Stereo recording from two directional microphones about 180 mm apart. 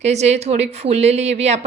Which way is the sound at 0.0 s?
40° right (ahead or behind).